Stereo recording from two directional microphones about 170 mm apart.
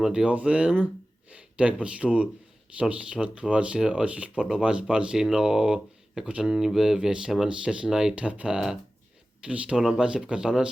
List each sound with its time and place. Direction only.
0.0 s speech: 5° right (ahead or behind)